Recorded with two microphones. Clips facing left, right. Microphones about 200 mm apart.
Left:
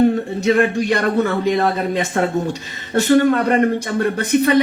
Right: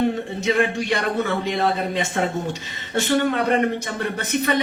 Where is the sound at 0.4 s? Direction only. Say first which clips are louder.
Left 5 dB; 45° left (ahead or behind).